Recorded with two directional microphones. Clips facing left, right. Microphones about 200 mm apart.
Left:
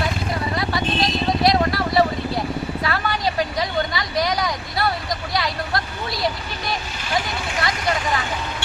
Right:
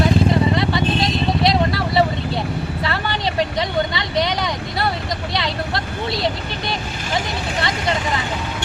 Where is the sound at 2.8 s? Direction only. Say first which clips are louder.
Even; 25° right (ahead or behind).